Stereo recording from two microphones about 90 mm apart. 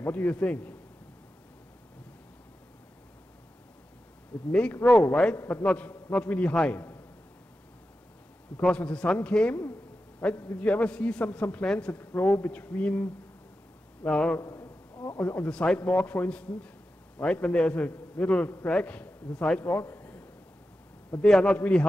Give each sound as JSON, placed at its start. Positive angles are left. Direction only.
{"t": 0.0, "sound": "a man's voice", "side_deg": 15}
{"t": 4.5, "sound": "a man's voice", "side_deg": 15}
{"t": 8.5, "sound": "a man's voice", "side_deg": 15}
{"t": 14.4, "sound": "a sound", "side_deg": 35}
{"t": 15.1, "sound": "a man's voice", "side_deg": 15}
{"t": 19.6, "sound": "a man's voice", "side_deg": 25}
{"t": 21.2, "sound": "a man's voice", "side_deg": 10}